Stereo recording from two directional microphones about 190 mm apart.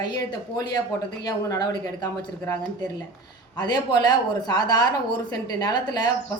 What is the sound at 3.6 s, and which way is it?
Speech, 20° left (ahead or behind).